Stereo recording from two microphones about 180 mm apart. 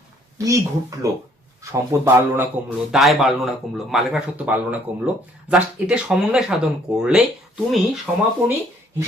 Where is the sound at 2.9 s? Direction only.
Centre (ahead or behind).